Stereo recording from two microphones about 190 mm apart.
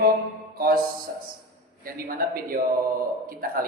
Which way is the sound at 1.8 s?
50° right (ahead or behind).